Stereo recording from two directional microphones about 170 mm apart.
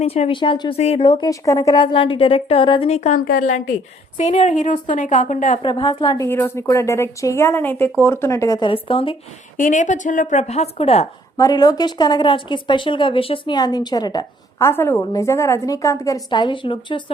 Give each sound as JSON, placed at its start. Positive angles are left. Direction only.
{"t": 0.0, "sound": "a woman's voice", "side_deg": 35}
{"t": 1.0, "sound": "a woman's voice", "side_deg": 25}
{"t": 5.6, "sound": "a woman's voice", "side_deg": 30}
{"t": 9.6, "sound": "a woman's voice", "side_deg": 50}
{"t": 11.3, "sound": "speech", "side_deg": 20}